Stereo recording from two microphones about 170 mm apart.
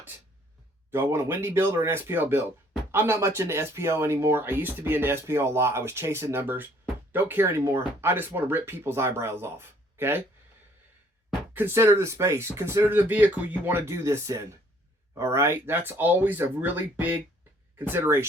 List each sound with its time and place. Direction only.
0.9 s speech: 15° right (ahead or behind)
11.5 s speech: 15° right (ahead or behind)